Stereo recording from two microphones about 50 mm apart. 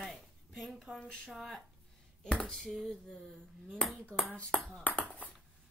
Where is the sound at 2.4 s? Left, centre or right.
Centre.